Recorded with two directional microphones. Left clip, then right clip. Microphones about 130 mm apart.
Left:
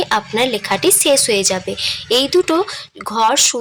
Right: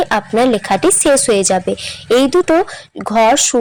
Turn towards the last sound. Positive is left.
turn(degrees=-35)  # may be behind; listen again after turning